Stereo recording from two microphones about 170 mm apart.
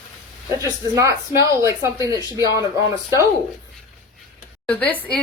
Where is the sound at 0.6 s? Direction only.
20° right (ahead or behind).